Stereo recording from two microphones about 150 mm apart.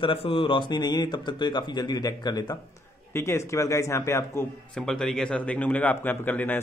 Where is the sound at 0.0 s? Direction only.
35° left (ahead or behind); by 4.5 s 20° left (ahead or behind).